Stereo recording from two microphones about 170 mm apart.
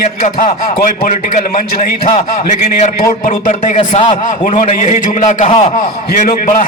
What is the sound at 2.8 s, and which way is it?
A man's voice, 50° left (ahead or behind).